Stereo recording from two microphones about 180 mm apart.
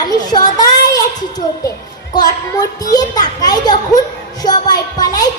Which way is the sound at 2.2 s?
20° left (ahead or behind).